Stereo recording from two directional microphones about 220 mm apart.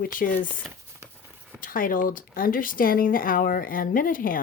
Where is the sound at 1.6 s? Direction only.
40° left (ahead or behind).